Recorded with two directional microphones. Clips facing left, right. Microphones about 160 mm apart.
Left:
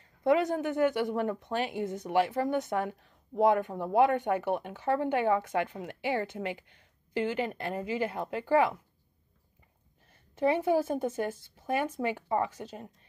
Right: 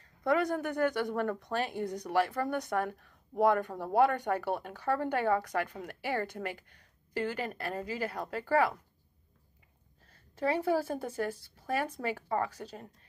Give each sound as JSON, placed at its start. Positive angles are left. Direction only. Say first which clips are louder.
{"t": 0.2, "sound": "speech", "louder": "left 3 dB", "side_deg": 20}
{"t": 10.1, "sound": "speech", "louder": "left 4 dB", "side_deg": 20}